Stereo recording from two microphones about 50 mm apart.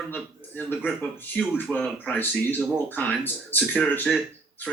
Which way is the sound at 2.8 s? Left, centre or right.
Left.